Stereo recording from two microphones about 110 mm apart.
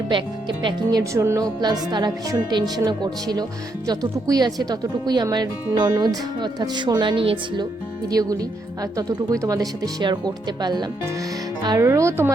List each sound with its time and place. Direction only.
0.1 s speech: 45° right (ahead or behind)
1.2 s speech: 25° right (ahead or behind)
1.6 s speech: 40° right (ahead or behind)
8.1 s speech: 35° right (ahead or behind)
11.8 s speech: 25° right (ahead or behind)